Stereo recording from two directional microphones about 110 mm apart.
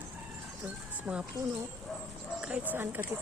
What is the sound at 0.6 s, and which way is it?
Music, 10° right (ahead or behind).